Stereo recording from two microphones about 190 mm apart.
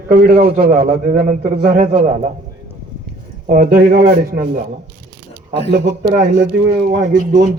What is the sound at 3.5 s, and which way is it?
Speech, 50° right (ahead or behind).